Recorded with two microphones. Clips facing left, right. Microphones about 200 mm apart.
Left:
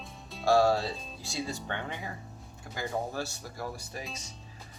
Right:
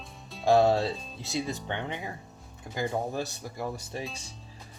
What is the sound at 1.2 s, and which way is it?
Speech, 20° right (ahead or behind).